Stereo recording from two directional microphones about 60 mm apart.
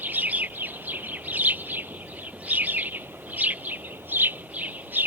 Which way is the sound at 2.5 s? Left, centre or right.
Right.